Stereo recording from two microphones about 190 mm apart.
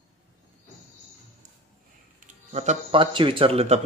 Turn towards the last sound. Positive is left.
turn(degrees=-30)  # may be behind; listen again after turning